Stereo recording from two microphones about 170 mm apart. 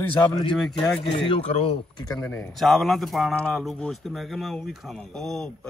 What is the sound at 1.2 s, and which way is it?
Speech, 35° left (ahead or behind).